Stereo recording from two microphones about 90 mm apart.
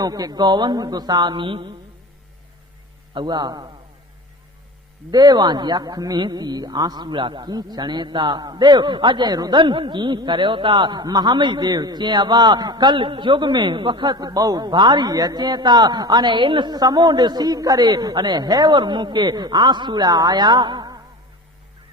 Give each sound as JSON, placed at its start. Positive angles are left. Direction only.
{"t": 0.0, "sound": "a man's voice", "side_deg": -45}
{"t": 3.2, "sound": "a man's voice", "side_deg": -55}
{"t": 5.1, "sound": "a man's voice", "side_deg": -50}